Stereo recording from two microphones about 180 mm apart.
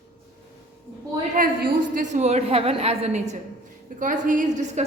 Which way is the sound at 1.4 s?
50° right (ahead or behind).